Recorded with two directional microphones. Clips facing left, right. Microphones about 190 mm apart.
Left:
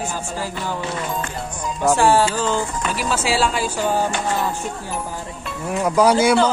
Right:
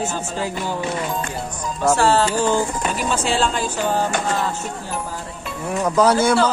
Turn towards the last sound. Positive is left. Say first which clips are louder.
# left 1 dB
turn(degrees=10)  # may be behind; listen again after turning